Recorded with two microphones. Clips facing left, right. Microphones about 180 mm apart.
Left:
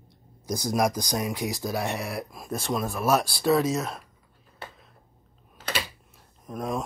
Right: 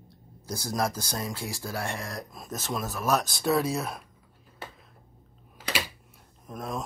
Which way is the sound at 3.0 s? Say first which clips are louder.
Left 2 dB; 10° left (ahead or behind).